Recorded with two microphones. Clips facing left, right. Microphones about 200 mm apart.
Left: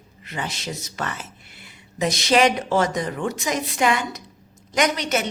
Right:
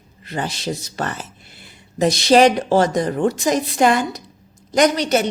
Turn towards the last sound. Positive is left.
turn(degrees=-35)  # may be behind; listen again after turning